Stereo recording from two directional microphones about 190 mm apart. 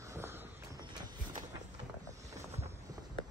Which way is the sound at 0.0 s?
15° right (ahead or behind).